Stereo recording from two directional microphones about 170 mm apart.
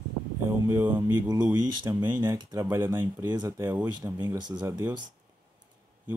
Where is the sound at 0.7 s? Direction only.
15° right (ahead or behind).